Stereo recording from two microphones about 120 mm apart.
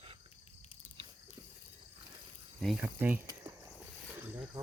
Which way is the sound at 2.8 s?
15° right (ahead or behind).